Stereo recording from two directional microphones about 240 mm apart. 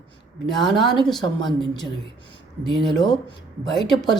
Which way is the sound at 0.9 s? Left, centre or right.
Centre.